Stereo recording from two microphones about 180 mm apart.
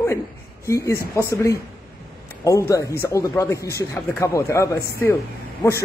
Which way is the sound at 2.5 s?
15° left (ahead or behind).